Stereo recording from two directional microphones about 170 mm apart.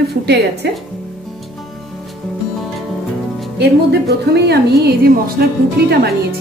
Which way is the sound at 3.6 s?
80° right.